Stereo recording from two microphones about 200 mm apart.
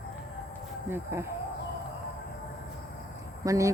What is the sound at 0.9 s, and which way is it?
Speech, 10° right (ahead or behind).